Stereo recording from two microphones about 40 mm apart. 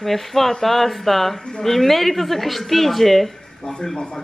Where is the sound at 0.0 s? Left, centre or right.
Centre.